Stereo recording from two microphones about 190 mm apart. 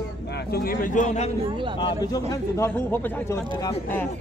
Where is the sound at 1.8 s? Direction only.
20° left (ahead or behind).